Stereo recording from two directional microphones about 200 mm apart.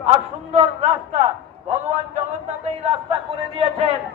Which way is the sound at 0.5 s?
35° right (ahead or behind).